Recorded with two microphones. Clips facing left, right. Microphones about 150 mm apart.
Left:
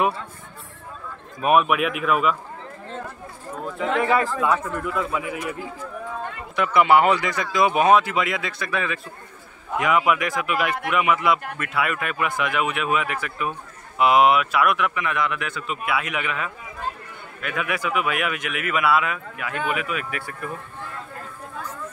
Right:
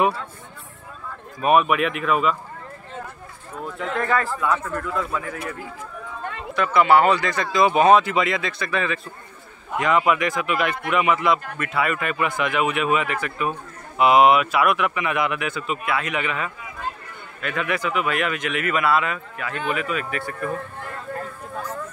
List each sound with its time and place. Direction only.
1.4 s speech: centre (ahead or behind)
4.0 s speech: 10° left (ahead or behind)